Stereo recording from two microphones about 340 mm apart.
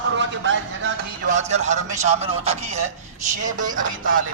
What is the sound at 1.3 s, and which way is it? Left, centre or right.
Speech, centre.